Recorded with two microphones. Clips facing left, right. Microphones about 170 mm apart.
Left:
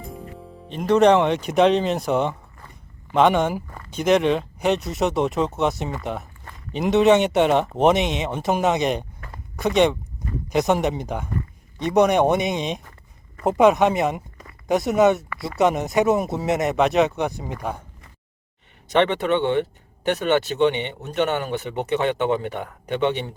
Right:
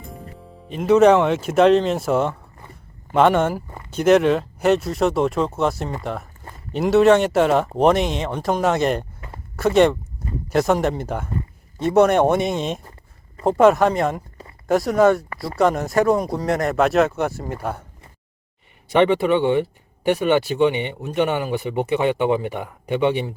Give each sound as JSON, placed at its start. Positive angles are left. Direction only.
{"t": 0.7, "sound": "speech", "side_deg": -5}
{"t": 11.9, "sound": "a man's voice", "side_deg": 15}
{"t": 12.2, "sound": "speech", "side_deg": 0}
{"t": 14.9, "sound": "speech", "side_deg": 20}
{"t": 15.4, "sound": "speech", "side_deg": 0}
{"t": 18.9, "sound": "speech", "side_deg": -10}